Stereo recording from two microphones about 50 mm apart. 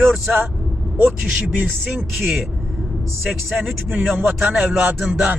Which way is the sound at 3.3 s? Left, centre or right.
Centre.